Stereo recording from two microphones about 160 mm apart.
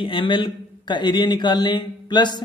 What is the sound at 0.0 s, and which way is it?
A man's voice, 30° left (ahead or behind).